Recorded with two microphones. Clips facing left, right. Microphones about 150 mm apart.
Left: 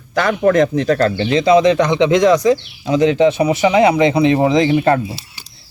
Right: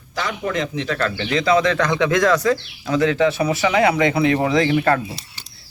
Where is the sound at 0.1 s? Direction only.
60° left (ahead or behind); by 1.1 s 40° left (ahead or behind).